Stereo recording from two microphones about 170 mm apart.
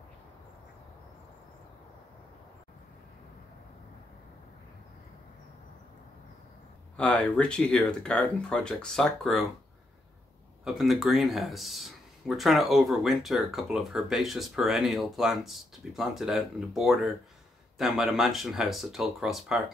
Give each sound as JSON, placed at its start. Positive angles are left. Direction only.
{"t": 7.0, "sound": "speech", "side_deg": 10}
{"t": 10.6, "sound": "speech", "side_deg": 0}